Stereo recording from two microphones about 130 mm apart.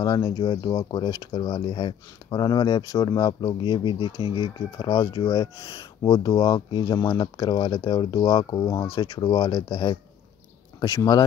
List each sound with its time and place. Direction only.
0.0 s speech: 30° left (ahead or behind)
8.8 s speech: 45° left (ahead or behind)
9.1 s speech: 35° left (ahead or behind)